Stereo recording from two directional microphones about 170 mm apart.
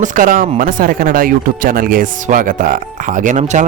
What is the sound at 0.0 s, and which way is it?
Speech, 50° right (ahead or behind).